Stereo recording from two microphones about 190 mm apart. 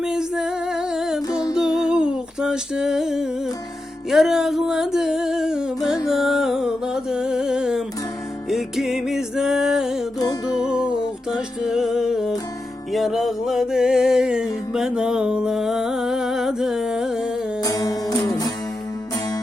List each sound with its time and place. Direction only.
0.0 s music: 5° right (ahead or behind)
1.3 s music: 20° left (ahead or behind)
1.5 s humming: 5° right (ahead or behind)
4.1 s a sound: centre (ahead or behind)
6.1 s music: centre (ahead or behind)
10.2 s music: 20° left (ahead or behind)
10.6 s music: 5° right (ahead or behind)
17.6 s music: 20° left (ahead or behind)